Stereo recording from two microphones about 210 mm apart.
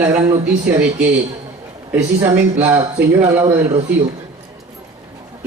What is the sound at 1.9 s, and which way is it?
A man's voice, 15° right (ahead or behind).